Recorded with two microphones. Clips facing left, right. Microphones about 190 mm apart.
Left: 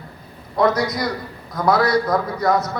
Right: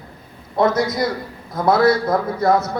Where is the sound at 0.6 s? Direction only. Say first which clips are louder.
Right 1 dB; 25° right (ahead or behind).